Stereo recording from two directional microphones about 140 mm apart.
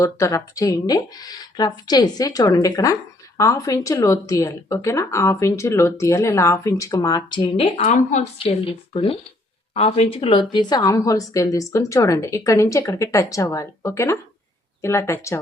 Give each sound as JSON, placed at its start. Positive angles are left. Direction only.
{"t": 0.0, "sound": "speech", "side_deg": 20}
{"t": 7.9, "sound": "speech", "side_deg": 55}